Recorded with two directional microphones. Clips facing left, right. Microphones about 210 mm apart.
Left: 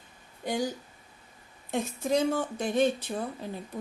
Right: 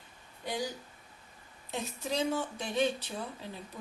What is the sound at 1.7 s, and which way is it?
Speech, 50° left (ahead or behind).